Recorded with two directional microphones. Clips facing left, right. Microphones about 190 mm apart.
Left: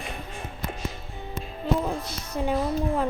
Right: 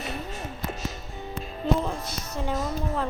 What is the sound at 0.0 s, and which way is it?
Music, 40° right (ahead or behind).